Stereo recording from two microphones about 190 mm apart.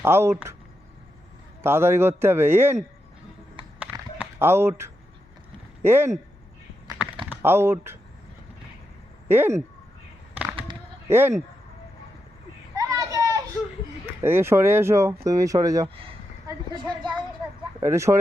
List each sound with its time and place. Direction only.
0.0 s speech: 15° right (ahead or behind)
1.6 s speech: 10° right (ahead or behind)
4.2 s speech: 10° right (ahead or behind)
7.3 s speech: 10° right (ahead or behind)
9.3 s speech: 10° right (ahead or behind)
10.5 s a sound: 30° right (ahead or behind)
11.1 s speech: 15° right (ahead or behind)
12.7 s a sound: 15° right (ahead or behind)
14.2 s speech: 10° right (ahead or behind)